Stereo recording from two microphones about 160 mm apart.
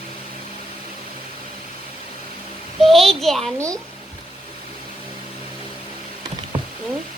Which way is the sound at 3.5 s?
20° right (ahead or behind).